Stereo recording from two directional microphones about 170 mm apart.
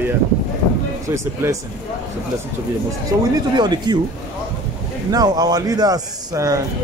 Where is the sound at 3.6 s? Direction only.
25° right (ahead or behind).